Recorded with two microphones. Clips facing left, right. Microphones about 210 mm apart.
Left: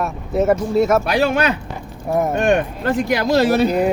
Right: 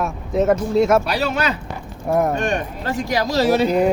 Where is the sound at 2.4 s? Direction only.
60° left (ahead or behind).